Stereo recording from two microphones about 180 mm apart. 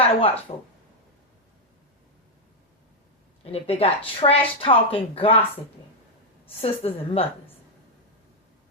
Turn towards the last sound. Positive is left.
turn(degrees=30)  # may be behind; listen again after turning